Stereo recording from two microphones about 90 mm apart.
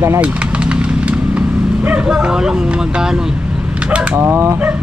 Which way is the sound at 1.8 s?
15° right (ahead or behind).